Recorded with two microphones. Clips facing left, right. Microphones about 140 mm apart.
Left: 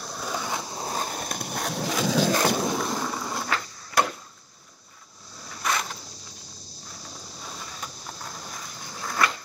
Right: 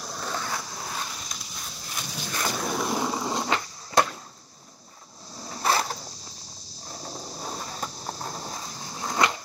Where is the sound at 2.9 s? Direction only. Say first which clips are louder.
Right 3 dB; 20° right (ahead or behind).